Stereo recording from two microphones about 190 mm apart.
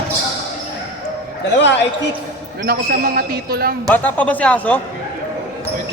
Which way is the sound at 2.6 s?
55° right (ahead or behind).